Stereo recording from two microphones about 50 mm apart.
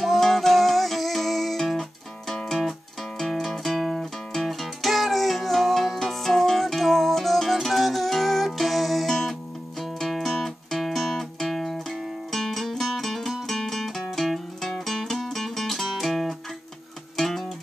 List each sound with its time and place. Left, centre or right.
0.0 s music: centre